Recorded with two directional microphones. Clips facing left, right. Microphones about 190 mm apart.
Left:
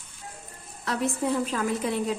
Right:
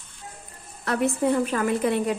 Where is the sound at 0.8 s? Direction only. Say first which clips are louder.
Right 4 dB; 60° right (ahead or behind).